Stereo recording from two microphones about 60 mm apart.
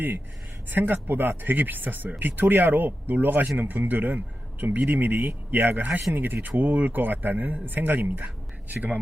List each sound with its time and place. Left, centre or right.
0.7 s speech: right